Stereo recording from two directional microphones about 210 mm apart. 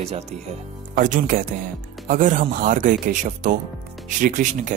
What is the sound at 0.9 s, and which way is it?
Speech, 40° right (ahead or behind).